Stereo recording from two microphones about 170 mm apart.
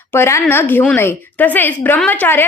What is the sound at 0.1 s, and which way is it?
A woman's voice, 15° left (ahead or behind).